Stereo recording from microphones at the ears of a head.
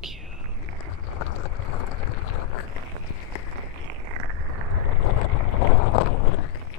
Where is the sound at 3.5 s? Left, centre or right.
Right.